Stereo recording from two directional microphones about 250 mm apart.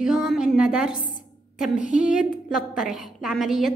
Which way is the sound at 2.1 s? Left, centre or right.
Centre.